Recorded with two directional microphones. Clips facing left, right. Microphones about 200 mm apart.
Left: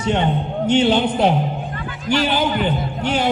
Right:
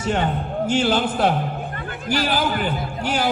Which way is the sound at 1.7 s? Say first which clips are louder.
Left 1 dB; 55° right (ahead or behind).